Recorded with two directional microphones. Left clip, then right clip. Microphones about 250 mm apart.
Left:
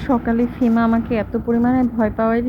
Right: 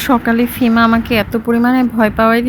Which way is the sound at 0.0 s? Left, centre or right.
Right.